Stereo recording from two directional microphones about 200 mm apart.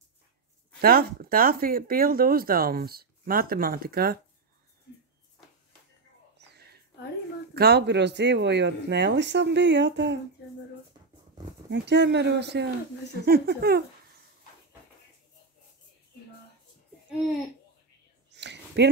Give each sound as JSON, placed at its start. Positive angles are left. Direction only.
{"t": 0.7, "sound": "speech", "side_deg": -50}
{"t": 6.3, "sound": "whispering", "side_deg": -60}
{"t": 7.5, "sound": "speech", "side_deg": -55}
{"t": 11.7, "sound": "speech", "side_deg": -60}
{"t": 18.3, "sound": "a sound", "side_deg": -60}